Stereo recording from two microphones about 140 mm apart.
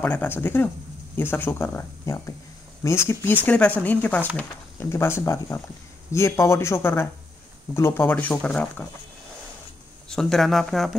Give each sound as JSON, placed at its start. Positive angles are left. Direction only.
{"t": 0.0, "sound": "speech", "side_deg": 15}
{"t": 10.0, "sound": "speech", "side_deg": 0}